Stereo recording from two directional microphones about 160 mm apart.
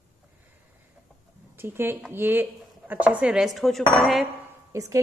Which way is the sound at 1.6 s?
15° right (ahead or behind).